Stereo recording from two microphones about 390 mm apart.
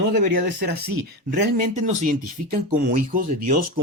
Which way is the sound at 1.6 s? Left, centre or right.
Centre.